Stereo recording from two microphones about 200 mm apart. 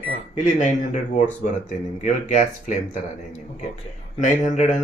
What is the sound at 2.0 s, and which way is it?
Speech, 40° left (ahead or behind).